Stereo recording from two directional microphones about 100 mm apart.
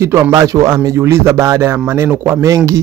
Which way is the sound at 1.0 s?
25° right (ahead or behind).